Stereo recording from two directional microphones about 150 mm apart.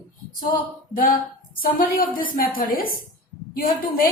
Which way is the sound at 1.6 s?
70° left (ahead or behind).